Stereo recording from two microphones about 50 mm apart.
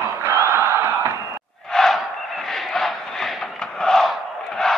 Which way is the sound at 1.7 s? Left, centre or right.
Centre.